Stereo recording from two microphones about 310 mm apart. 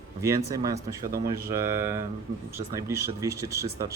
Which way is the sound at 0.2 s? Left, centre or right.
Centre.